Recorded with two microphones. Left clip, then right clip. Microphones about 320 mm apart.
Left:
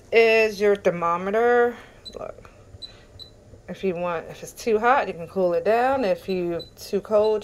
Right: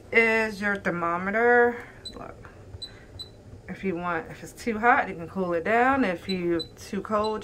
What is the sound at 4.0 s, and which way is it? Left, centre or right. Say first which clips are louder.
Speech: left 3 dB; centre.